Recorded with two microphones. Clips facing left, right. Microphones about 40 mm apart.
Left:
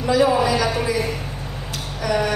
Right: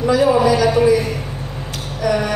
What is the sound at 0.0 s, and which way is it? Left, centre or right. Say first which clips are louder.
Speech: right 3 dB; centre.